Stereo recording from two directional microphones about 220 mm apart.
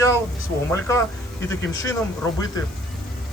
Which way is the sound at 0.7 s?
15° left (ahead or behind).